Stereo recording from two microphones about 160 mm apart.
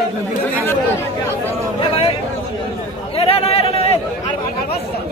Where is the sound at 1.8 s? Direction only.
35° left (ahead or behind).